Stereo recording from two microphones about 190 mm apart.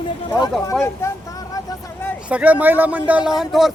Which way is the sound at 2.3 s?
10° right (ahead or behind).